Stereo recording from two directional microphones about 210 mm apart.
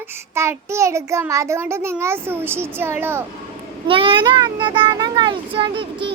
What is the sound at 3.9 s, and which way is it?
A child's voice, 25° right (ahead or behind).